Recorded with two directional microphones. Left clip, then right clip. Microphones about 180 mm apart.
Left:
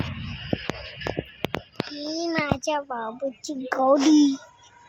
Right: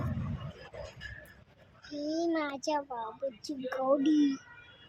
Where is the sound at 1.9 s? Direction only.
25° left (ahead or behind).